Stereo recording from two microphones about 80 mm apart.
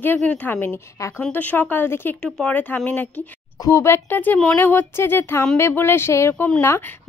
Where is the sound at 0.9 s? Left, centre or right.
Left.